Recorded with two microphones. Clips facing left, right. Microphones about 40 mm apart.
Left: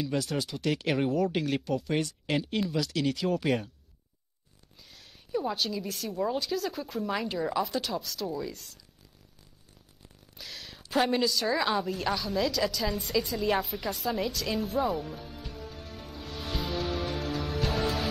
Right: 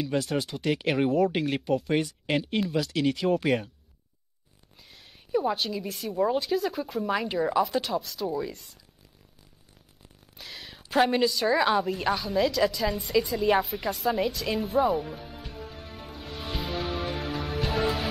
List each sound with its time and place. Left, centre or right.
0.0 s a woman's voice: centre
2.0 s a woman's voice: centre
2.3 s a woman's voice: centre
3.4 s speech: centre
5.3 s a woman's voice: centre
10.3 s a sound: centre
10.9 s a woman's voice: centre
12.1 s a sound: centre